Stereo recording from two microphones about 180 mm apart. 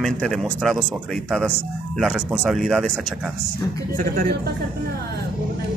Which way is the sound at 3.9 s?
50° right (ahead or behind).